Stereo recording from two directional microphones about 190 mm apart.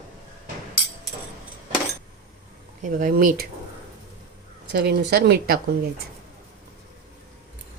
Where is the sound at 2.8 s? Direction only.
45° right (ahead or behind).